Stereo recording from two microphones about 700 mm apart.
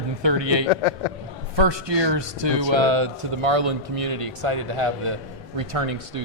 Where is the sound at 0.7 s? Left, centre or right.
Left.